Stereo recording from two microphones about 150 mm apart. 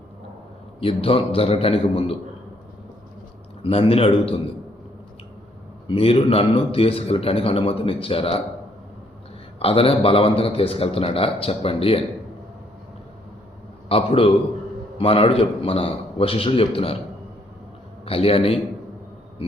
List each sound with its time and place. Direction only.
0.8 s a man's voice: 35° left (ahead or behind)
3.6 s a man's voice: 40° left (ahead or behind)
5.9 s a man's voice: 40° left (ahead or behind)
9.6 s a man's voice: 40° left (ahead or behind)
13.8 s a man's voice: 40° left (ahead or behind)
18.0 s a man's voice: 40° left (ahead or behind)